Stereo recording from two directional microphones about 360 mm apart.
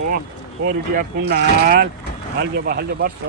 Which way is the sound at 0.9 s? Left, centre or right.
Right.